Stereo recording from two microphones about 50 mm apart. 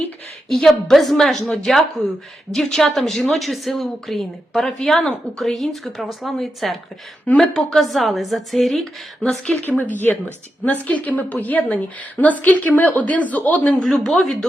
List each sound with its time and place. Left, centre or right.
0.4 s a woman's voice: centre
7.8 s a woman's voice: centre
9.6 s a woman's voice: left
13.8 s a woman's voice: centre